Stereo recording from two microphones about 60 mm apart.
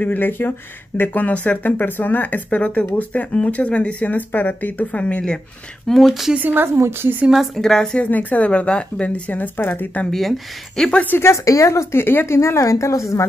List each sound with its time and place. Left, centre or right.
0.0 s speech: left
5.9 s speech: centre
6.5 s a woman's voice: right
7.5 s speech: centre
8.0 s speech: left
10.1 s speech: centre
11.1 s a woman's voice: left
12.4 s a woman's voice: left